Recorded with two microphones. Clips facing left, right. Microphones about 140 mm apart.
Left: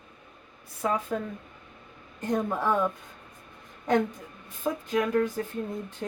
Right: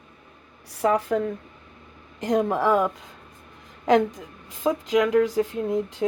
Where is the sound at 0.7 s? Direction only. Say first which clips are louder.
Right 7 dB; 80° right.